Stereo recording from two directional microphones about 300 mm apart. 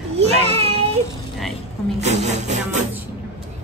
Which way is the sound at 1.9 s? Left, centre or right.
Right.